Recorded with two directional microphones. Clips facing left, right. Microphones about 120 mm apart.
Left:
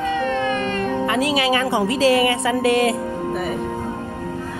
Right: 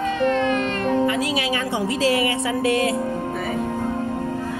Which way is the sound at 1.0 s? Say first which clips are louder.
Left 2 dB; 90° left.